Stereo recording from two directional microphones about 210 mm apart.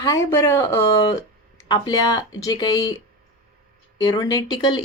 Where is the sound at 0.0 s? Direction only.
15° left (ahead or behind).